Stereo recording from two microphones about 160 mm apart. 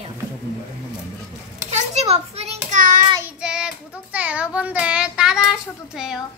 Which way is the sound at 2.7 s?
55° right (ahead or behind).